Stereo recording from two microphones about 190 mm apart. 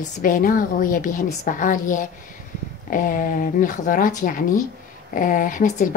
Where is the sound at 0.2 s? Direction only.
45° left (ahead or behind).